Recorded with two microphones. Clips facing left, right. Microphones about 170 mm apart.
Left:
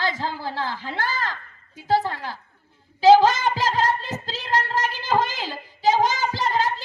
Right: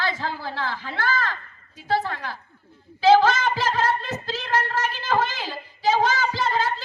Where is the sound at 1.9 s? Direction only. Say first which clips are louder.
Left 3 dB; 15° left (ahead or behind).